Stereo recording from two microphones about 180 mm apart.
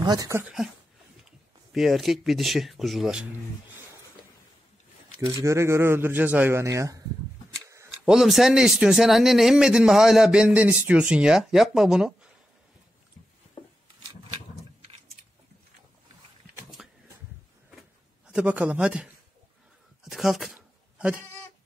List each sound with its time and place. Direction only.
0.0 s speech: 20° right (ahead or behind)
0.4 s speech: 5° right (ahead or behind)
1.7 s speech: centre (ahead or behind)
5.2 s speech: 15° right (ahead or behind)
7.7 s tick-tock: 15° right (ahead or behind)
8.1 s speech: centre (ahead or behind)
13.6 s a sound: 30° left (ahead or behind)
16.8 s a sound: centre (ahead or behind)
20.1 s a sound: centre (ahead or behind)